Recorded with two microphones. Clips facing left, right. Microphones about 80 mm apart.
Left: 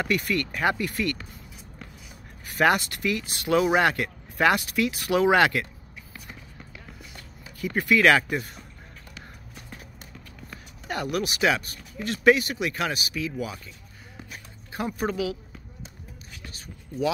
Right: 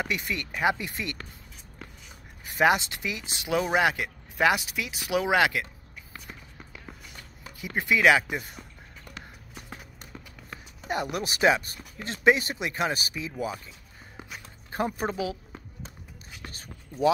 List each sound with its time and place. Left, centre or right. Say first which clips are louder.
0.0 s speech: left 5 dB; centre
2.4 s speech: left 1 dB; centre
3.5 s speech: left 3 dB; centre
7.6 s speech: left 2 dB; centre
10.9 s speech: left 2 dB; right
14.7 s speech: even; right
16.4 s a sound: even; right